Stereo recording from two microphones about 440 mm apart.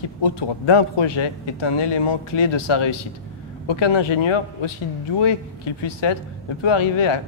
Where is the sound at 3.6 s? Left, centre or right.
Left.